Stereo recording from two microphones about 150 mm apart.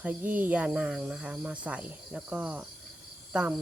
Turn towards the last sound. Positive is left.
turn(degrees=-5)  # may be behind; listen again after turning